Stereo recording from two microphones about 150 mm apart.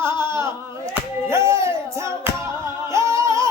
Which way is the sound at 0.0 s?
30° left (ahead or behind).